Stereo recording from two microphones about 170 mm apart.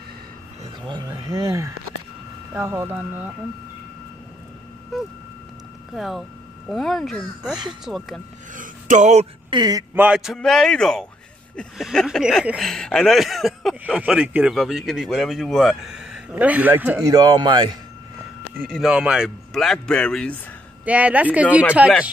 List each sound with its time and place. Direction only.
0.8 s speech: 25° right (ahead or behind)
5.9 s speech: centre (ahead or behind)
8.5 s a sound: 45° right (ahead or behind)
9.5 s speech: 25° right (ahead or behind)
9.9 s speech: 5° right (ahead or behind); by 17.7 s 25° right (ahead or behind)
18.6 s speech: 5° right (ahead or behind)
20.8 s speech: 10° right (ahead or behind)